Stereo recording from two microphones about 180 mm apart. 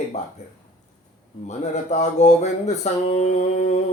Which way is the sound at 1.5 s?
40° left (ahead or behind).